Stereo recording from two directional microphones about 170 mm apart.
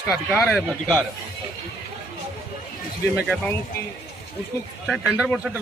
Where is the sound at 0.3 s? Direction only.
10° left (ahead or behind).